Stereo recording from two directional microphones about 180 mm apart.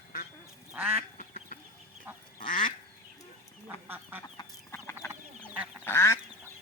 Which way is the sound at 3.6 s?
10° right (ahead or behind).